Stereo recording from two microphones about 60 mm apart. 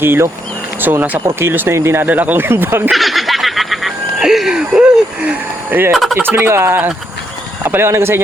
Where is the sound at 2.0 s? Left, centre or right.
Right.